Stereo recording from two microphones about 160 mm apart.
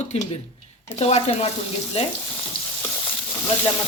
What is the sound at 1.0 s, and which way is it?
Speech, 40° left (ahead or behind).